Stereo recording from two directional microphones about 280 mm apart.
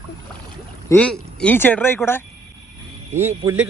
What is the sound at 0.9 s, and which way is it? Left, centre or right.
Speech, centre.